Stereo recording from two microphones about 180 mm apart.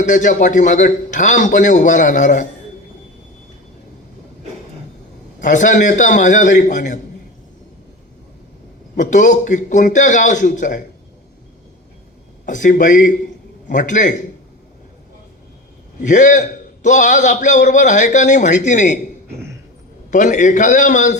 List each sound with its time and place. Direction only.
0.0 s a man's voice: 45° left (ahead or behind)
5.4 s a man's voice: 45° left (ahead or behind)
9.0 s a man's voice: 45° left (ahead or behind)
12.5 s a man's voice: 45° left (ahead or behind)
16.0 s a man's voice: 45° left (ahead or behind)
20.1 s a man's voice: 45° left (ahead or behind)